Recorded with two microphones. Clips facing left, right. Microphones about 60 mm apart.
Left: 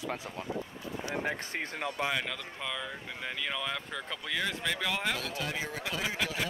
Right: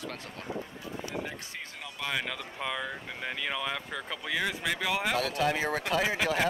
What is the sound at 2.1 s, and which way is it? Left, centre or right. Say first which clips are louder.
Speech: right 1 dB; centre.